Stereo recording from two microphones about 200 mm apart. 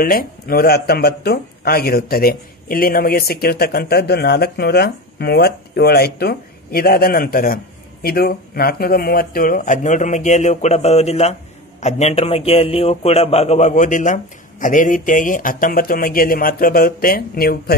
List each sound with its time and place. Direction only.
0.0 s a man's voice: 45° left (ahead or behind)